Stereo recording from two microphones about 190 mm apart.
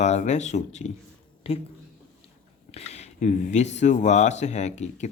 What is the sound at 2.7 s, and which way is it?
Speech, 35° left (ahead or behind).